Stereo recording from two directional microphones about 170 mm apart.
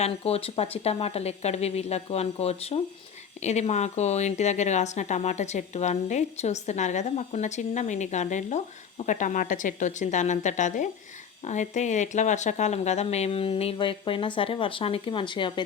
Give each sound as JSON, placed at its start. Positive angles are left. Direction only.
{"t": 0.0, "sound": "a woman's voice", "side_deg": 35}